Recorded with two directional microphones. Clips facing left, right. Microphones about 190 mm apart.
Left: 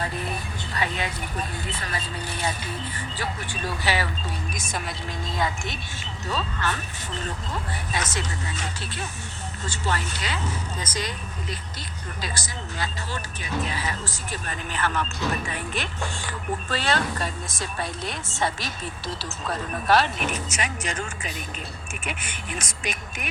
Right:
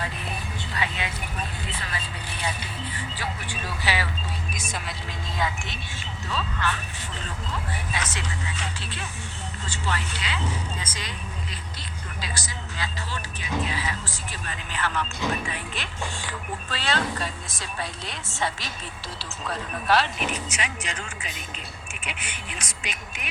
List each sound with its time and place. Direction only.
0.7 s speech: 45° left (ahead or behind)
3.8 s speech: 45° left (ahead or behind)
6.3 s speech: 40° left (ahead or behind)
7.9 s speech: 45° left (ahead or behind)
12.2 s speech: 45° left (ahead or behind)